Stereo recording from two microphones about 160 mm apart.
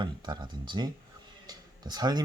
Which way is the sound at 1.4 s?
25° right (ahead or behind).